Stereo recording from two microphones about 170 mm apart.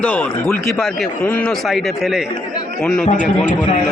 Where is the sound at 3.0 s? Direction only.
50° left (ahead or behind).